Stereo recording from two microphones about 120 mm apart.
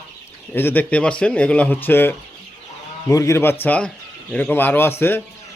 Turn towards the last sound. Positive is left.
turn(degrees=20)  # may be behind; listen again after turning